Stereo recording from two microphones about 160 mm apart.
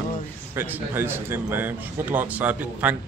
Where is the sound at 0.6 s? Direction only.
10° right (ahead or behind).